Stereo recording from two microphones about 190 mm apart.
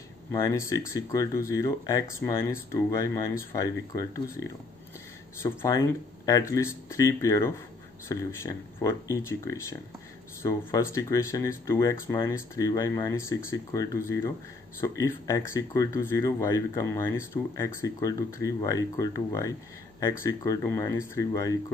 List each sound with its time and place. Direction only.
0.3 s speech: 15° left (ahead or behind)
5.4 s speech: 15° left (ahead or behind)